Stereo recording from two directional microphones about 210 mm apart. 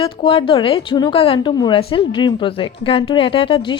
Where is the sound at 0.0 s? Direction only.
25° left (ahead or behind).